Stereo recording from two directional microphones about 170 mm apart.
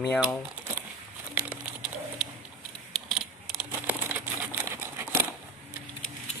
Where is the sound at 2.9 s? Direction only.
Centre (ahead or behind).